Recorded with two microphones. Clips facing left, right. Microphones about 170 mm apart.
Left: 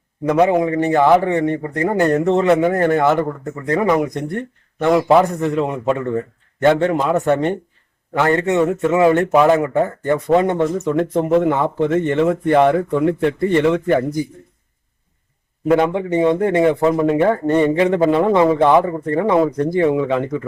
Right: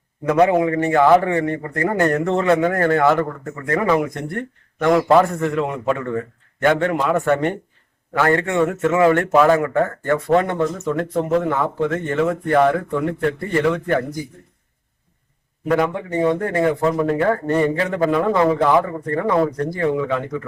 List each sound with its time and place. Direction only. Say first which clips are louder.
0.4 s a man's voice: even; 20° left (ahead or behind)
4.9 s a man's voice: left 1 dB; 10° left (ahead or behind)
15.6 s a man's voice: left 4 dB; 25° left (ahead or behind)